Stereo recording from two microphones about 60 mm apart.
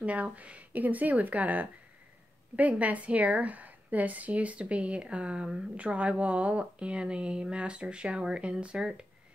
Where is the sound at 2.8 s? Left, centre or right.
Right.